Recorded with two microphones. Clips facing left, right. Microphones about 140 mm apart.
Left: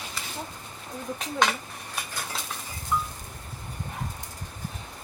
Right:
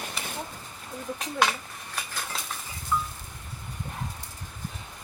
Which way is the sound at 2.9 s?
10° left (ahead or behind).